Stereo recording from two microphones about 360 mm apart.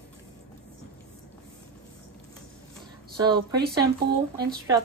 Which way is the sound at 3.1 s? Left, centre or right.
Centre.